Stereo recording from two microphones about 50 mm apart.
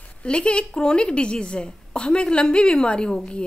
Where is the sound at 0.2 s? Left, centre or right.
Left.